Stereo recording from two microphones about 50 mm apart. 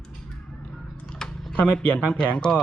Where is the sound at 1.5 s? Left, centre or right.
Left.